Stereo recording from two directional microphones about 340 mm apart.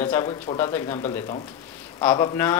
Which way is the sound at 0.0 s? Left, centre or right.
Centre.